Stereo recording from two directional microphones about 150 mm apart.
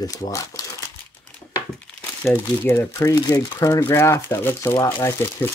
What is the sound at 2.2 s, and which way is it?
Speech, 15° left (ahead or behind).